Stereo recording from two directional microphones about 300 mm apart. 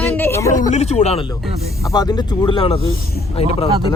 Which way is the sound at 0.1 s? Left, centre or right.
Centre.